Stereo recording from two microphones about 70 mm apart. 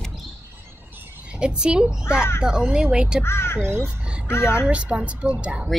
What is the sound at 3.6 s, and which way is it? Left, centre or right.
Speech, right.